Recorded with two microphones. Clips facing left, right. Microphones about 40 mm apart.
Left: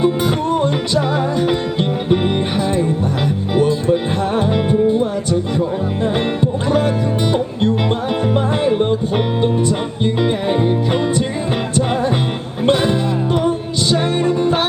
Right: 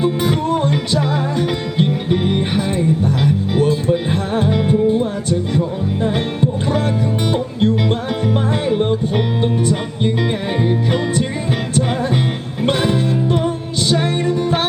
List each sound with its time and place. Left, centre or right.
0.0 s music: centre
2.1 s music: centre
3.9 s music: centre
7.3 s music: centre
10.0 s music: centre
12.6 s music: centre
14.3 s music: left